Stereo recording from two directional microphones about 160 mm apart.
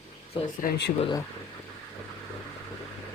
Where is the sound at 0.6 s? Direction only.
80° left.